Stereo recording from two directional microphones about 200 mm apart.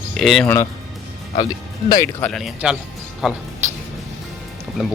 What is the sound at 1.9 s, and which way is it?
Speech, 15° left (ahead or behind).